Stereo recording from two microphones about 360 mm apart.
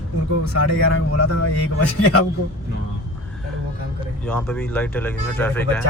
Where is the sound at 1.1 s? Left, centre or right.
Left.